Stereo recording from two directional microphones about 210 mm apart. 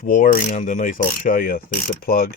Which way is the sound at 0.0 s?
40° left (ahead or behind).